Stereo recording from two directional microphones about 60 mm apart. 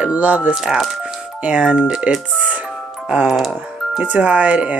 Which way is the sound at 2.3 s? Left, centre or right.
Right.